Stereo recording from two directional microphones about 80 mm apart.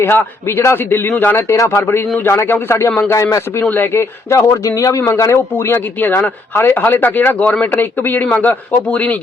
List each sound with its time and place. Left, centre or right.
0.0 s a man's voice: left
3.6 s a man's voice: left
4.3 s a man's voice: left; by 9.1 s centre